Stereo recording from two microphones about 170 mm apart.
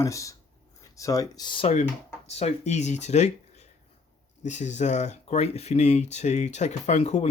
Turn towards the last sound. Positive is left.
turn(degrees=40)  # may be behind; listen again after turning